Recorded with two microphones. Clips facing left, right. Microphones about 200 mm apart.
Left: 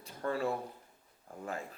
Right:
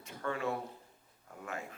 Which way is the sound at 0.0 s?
35° left (ahead or behind).